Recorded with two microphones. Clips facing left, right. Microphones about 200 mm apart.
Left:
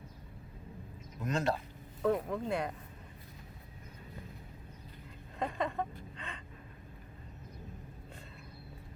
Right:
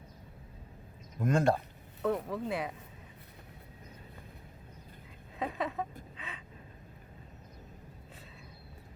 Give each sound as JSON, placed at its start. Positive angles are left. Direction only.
{"t": 1.2, "sound": "speech", "side_deg": -50}
{"t": 2.0, "sound": "speech", "side_deg": 0}
{"t": 5.4, "sound": "a sound", "side_deg": -5}